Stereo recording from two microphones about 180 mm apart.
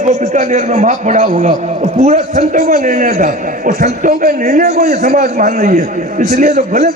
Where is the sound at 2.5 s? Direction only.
55° right (ahead or behind); by 6.9 s 35° right (ahead or behind).